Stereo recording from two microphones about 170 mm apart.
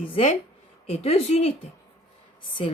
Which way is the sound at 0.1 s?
40° left (ahead or behind).